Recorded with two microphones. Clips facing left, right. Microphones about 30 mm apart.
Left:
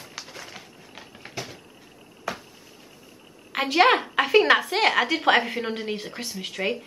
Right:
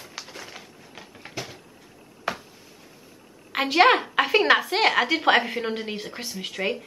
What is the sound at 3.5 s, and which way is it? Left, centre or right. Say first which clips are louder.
A woman's voice: right 1 dB; centre.